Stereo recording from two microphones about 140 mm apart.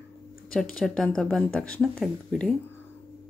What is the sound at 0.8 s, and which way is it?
Speech, 5° left (ahead or behind).